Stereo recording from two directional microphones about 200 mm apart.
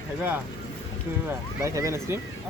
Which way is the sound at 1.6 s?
15° right (ahead or behind).